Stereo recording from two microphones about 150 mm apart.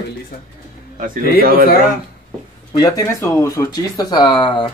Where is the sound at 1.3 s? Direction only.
90° right.